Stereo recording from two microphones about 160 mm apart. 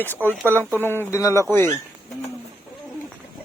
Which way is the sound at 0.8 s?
15° left (ahead or behind).